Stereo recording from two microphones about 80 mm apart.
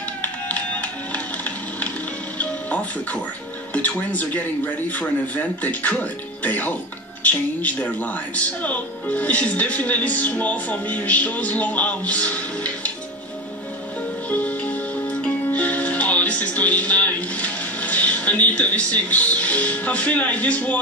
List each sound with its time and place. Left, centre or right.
0.2 s music: centre
3.7 s speech: centre
14.3 s music: centre